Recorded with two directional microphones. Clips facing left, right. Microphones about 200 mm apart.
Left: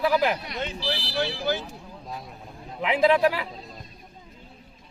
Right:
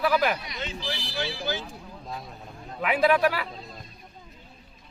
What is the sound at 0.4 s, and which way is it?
Speech, 60° left (ahead or behind).